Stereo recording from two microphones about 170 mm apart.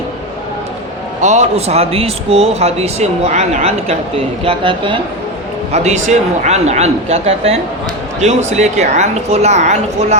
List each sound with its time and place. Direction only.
1.2 s speech: 45° right (ahead or behind)
5.7 s a woman's voice: 40° right (ahead or behind)